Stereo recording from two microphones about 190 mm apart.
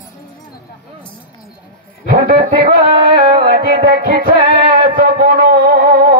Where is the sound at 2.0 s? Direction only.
50° right (ahead or behind).